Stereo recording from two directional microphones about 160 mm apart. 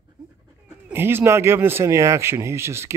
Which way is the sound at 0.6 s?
15° right (ahead or behind).